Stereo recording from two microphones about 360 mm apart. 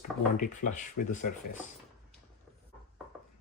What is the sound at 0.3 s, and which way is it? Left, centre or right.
Speech, left.